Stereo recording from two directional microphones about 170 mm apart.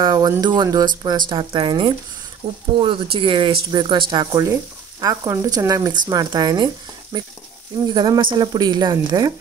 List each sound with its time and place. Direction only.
0.0 s speech: 25° right (ahead or behind)